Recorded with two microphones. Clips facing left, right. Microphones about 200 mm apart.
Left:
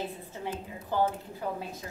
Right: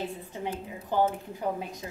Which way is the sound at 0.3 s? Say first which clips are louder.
Right 2 dB; 20° right (ahead or behind).